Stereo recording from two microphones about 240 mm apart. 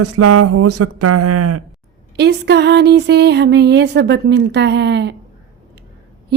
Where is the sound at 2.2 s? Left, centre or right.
Right.